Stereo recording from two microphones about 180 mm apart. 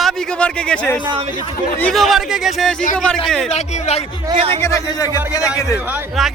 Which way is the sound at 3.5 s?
40° left (ahead or behind).